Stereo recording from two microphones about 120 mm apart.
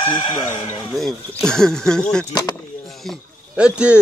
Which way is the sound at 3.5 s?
10° right (ahead or behind).